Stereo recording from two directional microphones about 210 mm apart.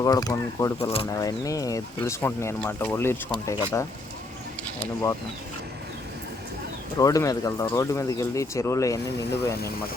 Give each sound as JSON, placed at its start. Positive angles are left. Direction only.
{"t": 0.0, "sound": "speech", "side_deg": 20}
{"t": 7.0, "sound": "speech", "side_deg": 15}